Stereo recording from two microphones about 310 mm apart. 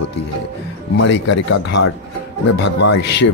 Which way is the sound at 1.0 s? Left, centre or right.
Left.